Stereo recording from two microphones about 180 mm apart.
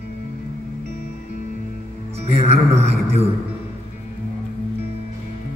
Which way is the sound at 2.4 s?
35° right (ahead or behind).